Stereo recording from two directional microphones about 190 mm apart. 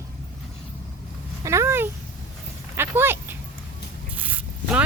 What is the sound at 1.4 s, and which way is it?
Speech, 15° right (ahead or behind).